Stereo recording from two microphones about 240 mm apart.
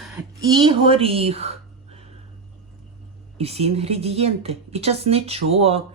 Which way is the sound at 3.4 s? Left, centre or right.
Right.